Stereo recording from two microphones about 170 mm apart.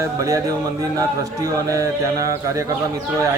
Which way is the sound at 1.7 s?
20° right (ahead or behind).